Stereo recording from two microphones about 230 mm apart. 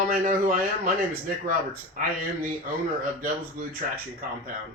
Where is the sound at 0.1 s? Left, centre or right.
Right.